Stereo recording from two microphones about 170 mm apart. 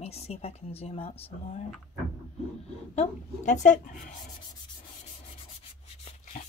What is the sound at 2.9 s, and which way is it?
Speech, 45° left (ahead or behind).